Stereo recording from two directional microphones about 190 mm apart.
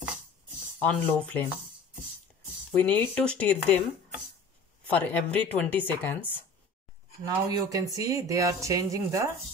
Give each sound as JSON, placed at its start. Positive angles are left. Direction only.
{"t": 0.7, "sound": "speech", "side_deg": 10}
{"t": 2.8, "sound": "speech", "side_deg": 10}
{"t": 4.8, "sound": "speech", "side_deg": 10}
{"t": 7.2, "sound": "speech", "side_deg": -15}